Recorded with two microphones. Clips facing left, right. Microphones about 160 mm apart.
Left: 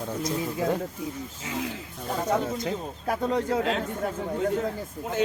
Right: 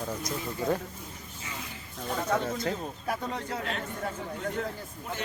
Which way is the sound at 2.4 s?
Centre (ahead or behind).